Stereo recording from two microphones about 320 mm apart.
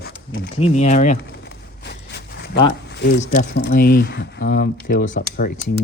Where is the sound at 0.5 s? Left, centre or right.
Left.